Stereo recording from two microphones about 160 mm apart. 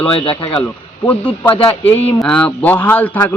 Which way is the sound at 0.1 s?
35° left (ahead or behind).